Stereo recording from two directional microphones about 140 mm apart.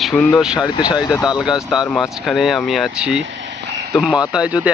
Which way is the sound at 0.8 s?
30° left (ahead or behind).